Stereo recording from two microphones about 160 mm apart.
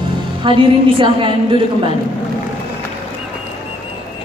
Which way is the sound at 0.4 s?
30° right (ahead or behind).